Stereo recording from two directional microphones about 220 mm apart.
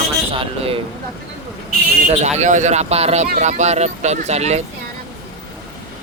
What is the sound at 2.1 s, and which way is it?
Speech, 30° right (ahead or behind).